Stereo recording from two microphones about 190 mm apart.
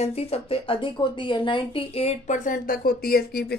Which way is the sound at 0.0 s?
35° left (ahead or behind).